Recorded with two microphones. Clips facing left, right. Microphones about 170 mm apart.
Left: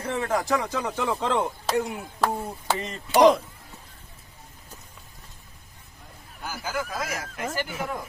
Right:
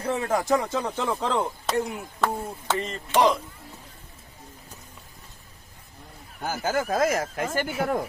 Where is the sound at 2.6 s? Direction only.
10° left (ahead or behind).